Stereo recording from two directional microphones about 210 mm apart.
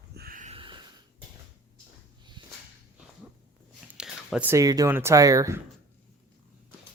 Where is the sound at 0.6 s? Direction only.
25° right (ahead or behind).